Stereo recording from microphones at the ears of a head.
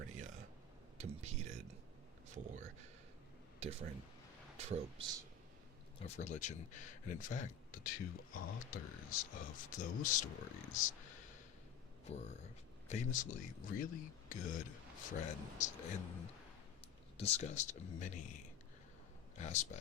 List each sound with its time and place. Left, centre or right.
0.0 s a sound: right
3.6 s speech: right
6.1 s speech: left
12.9 s speech: left